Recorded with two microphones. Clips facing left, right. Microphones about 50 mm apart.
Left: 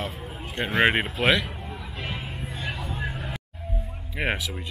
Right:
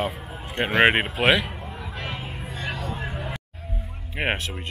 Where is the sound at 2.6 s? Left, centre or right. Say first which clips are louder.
Right 2 dB; centre.